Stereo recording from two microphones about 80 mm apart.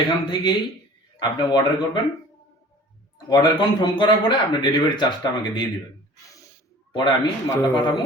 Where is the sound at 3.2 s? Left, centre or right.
Left.